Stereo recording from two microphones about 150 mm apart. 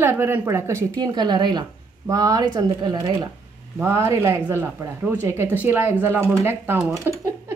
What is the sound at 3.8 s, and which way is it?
Speech, 20° right (ahead or behind).